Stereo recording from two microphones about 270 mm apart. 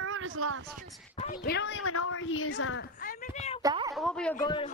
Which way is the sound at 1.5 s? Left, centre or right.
Left.